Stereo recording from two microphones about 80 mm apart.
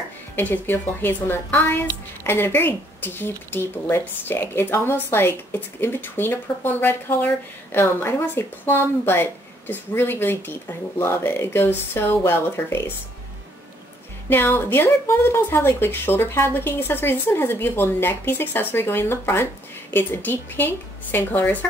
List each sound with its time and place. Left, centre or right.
0.4 s speech: left
14.3 s speech: left